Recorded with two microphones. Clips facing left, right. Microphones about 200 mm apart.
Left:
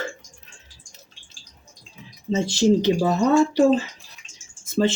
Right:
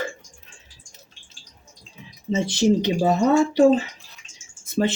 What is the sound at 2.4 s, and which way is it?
Speech, 20° right (ahead or behind).